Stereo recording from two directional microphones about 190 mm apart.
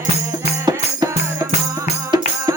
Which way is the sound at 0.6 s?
20° right (ahead or behind).